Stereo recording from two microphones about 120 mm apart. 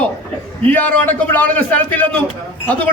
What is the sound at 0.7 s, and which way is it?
A man's voice, 15° left (ahead or behind).